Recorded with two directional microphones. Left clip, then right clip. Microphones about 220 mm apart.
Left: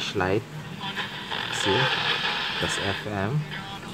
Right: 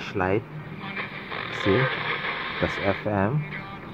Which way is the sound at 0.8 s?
15° left (ahead or behind).